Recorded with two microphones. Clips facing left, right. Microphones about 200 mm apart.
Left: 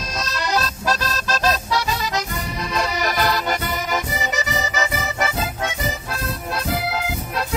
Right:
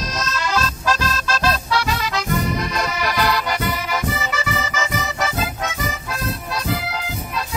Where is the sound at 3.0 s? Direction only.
45° left (ahead or behind).